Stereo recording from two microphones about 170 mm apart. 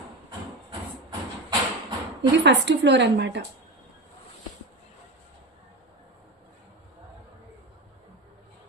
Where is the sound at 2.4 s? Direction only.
90° right.